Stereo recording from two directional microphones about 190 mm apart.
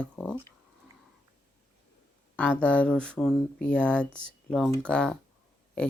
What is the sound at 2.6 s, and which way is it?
Speech, 5° left (ahead or behind).